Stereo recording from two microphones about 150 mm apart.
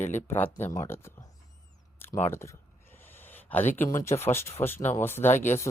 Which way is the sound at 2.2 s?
15° left (ahead or behind).